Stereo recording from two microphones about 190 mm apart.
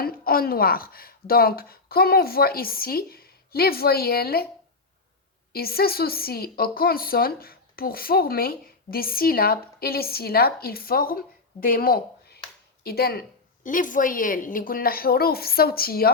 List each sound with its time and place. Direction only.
0.0 s speech: 50° left (ahead or behind)
5.5 s a woman's voice: 55° left (ahead or behind)